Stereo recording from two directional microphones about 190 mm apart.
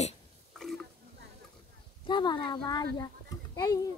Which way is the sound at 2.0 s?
25° left (ahead or behind).